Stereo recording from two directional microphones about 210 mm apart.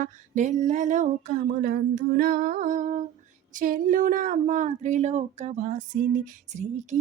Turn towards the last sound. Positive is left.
turn(degrees=-35)  # may be behind; listen again after turning